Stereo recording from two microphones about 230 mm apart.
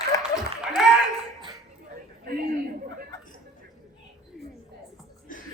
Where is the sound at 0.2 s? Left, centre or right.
Centre.